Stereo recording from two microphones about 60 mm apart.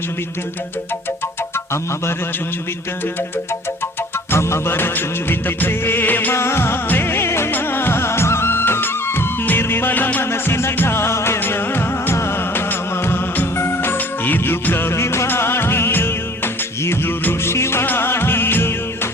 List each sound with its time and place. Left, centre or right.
4.3 s music of bollywood: left
6.3 s music of bollywood: left
6.8 s music: left
7.5 s music of bollywood: left
11.3 s music: left
12.1 s music of bollywood: left
15.3 s music: left
17.8 s music of bollywood: left